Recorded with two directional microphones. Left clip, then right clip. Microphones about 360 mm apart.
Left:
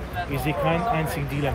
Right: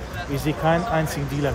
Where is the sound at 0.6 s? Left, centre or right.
Right.